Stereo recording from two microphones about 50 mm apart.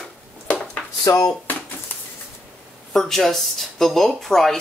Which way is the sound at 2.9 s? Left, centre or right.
Centre.